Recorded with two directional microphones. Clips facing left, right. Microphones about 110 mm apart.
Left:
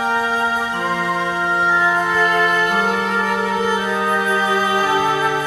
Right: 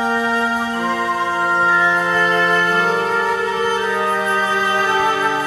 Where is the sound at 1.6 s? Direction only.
10° left (ahead or behind).